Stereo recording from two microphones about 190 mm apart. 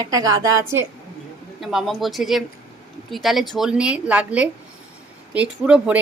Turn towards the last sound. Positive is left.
turn(degrees=-5)  # may be behind; listen again after turning